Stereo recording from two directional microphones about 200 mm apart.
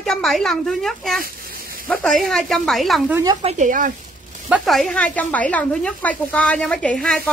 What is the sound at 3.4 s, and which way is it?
Speech, 35° right (ahead or behind).